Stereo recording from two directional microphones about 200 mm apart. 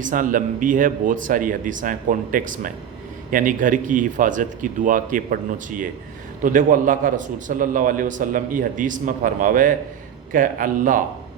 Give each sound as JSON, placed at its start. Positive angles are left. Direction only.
{"t": 0.0, "sound": "a man's voice", "side_deg": -40}